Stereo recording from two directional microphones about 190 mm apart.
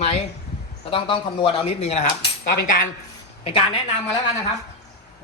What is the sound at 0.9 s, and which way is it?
Cutlery, 25° left (ahead or behind).